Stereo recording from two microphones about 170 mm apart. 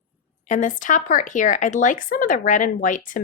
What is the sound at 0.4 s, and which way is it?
A woman's voice, 50° left (ahead or behind).